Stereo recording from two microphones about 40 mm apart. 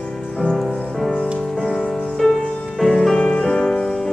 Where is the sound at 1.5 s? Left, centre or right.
Centre.